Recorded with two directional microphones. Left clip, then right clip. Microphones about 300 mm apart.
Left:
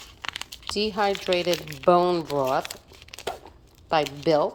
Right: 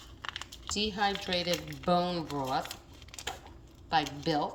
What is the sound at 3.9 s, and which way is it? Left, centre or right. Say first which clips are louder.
Speech: left 8 dB; centre.